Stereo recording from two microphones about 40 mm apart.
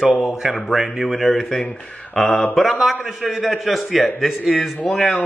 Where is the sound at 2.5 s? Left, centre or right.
Centre.